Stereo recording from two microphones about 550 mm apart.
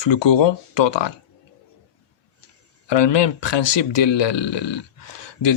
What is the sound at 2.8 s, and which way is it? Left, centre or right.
Speech, left.